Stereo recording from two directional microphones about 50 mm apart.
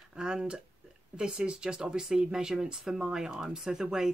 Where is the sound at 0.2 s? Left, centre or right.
Centre.